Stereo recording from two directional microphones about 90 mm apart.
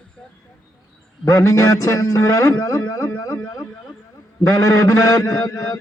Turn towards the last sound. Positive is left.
turn(degrees=35)  # may be behind; listen again after turning